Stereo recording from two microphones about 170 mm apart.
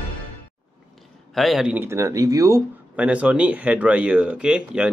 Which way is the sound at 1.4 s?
Centre (ahead or behind).